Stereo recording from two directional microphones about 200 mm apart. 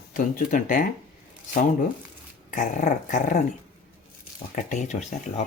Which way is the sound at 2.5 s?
40° left (ahead or behind).